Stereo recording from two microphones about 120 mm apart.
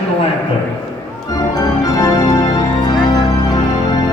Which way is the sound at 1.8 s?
30° left (ahead or behind).